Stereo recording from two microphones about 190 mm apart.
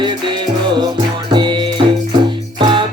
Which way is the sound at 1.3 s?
25° right (ahead or behind).